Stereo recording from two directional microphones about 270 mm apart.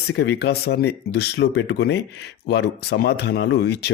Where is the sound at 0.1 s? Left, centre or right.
Left.